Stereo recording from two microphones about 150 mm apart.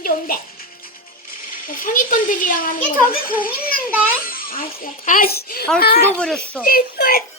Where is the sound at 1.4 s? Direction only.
65° left (ahead or behind); by 6.0 s 85° left.